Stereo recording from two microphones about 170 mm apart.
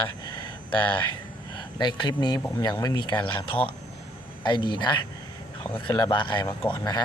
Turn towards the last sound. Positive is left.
turn(degrees=25)  # may be behind; listen again after turning